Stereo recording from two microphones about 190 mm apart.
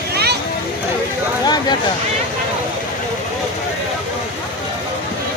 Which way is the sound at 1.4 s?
20° left (ahead or behind).